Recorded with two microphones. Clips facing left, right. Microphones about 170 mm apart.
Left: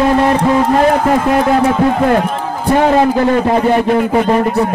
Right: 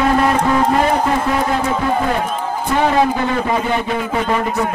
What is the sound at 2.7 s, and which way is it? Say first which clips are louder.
A man's voice: left 5 dB; 40° left (ahead or behind).